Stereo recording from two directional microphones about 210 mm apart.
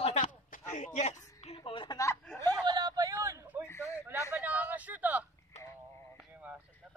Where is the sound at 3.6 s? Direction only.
10° left (ahead or behind).